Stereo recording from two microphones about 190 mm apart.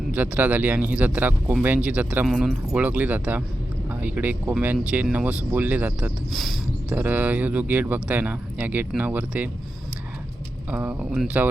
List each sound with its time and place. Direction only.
0.1 s speech: 10° right (ahead or behind)
10.7 s speech: 10° right (ahead or behind)